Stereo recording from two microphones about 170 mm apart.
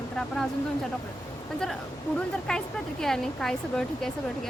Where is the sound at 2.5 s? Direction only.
5° left (ahead or behind).